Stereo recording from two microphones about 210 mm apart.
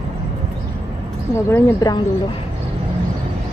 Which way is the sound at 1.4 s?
10° left (ahead or behind).